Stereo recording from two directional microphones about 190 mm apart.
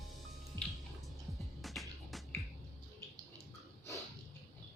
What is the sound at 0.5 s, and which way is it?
Music, 20° right (ahead or behind).